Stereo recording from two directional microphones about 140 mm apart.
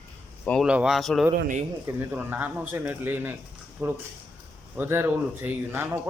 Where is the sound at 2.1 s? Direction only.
10° right (ahead or behind).